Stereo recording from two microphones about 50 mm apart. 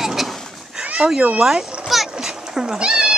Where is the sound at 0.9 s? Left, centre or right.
Centre.